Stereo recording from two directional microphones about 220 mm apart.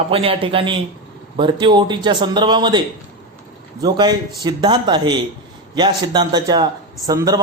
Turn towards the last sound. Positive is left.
turn(degrees=-15)  # may be behind; listen again after turning